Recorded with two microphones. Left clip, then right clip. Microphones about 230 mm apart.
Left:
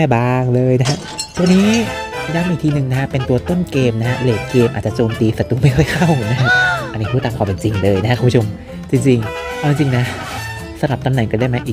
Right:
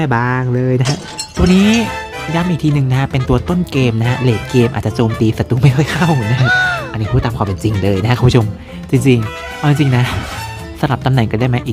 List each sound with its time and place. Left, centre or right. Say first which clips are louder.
0.0 s speech: left 1 dB; centre
1.5 s speech: right 3 dB; centre
7.6 s speech: left 2 dB; centre